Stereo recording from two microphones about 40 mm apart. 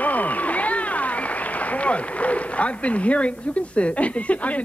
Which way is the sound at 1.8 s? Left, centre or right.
Left.